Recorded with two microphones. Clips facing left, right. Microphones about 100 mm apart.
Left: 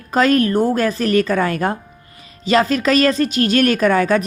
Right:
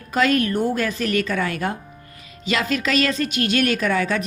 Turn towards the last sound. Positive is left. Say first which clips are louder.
# left 6 dB
turn(degrees=45)  # may be behind; listen again after turning